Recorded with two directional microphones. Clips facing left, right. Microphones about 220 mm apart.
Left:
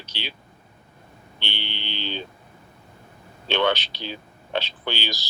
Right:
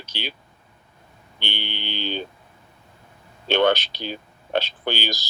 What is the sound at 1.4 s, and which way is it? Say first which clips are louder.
Speech: right 3 dB; 45° right (ahead or behind).